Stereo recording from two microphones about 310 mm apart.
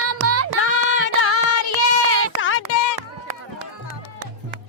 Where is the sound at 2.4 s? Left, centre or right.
Left.